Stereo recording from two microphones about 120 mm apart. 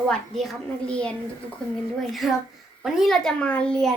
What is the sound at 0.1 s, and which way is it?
A child's voice, 5° left (ahead or behind).